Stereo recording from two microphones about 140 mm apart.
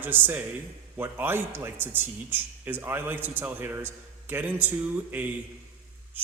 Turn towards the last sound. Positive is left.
turn(degrees=-15)  # may be behind; listen again after turning